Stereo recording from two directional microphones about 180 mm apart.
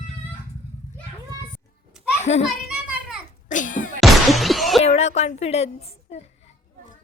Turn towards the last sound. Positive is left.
turn(degrees=35)  # may be behind; listen again after turning